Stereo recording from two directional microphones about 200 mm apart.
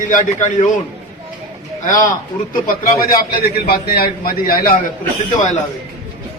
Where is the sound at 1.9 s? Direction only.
40° left (ahead or behind).